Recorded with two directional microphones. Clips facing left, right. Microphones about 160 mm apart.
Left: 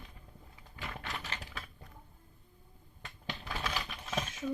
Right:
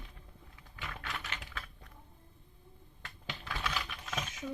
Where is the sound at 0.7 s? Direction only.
30° left (ahead or behind).